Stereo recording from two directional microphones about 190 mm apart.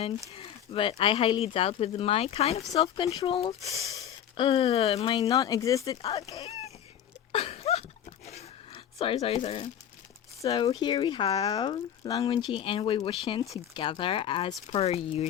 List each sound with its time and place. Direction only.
0.3 s speech: 30° left (ahead or behind)
7.3 s a sound: 30° left (ahead or behind)
10.4 s speech: 25° left (ahead or behind)